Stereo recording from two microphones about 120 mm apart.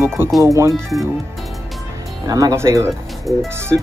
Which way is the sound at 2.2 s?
30° right (ahead or behind).